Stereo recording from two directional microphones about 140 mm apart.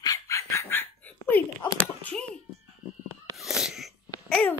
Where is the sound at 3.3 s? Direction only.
Centre (ahead or behind).